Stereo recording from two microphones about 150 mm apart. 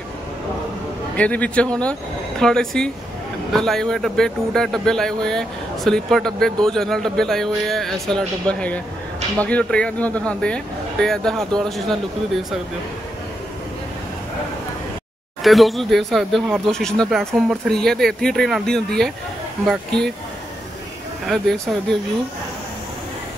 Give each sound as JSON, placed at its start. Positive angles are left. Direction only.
{"t": 1.1, "sound": "a man's voice", "side_deg": 10}
{"t": 15.4, "sound": "a man's voice", "side_deg": 0}